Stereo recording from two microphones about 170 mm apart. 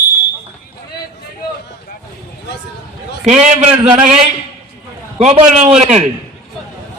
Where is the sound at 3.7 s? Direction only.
10° right (ahead or behind).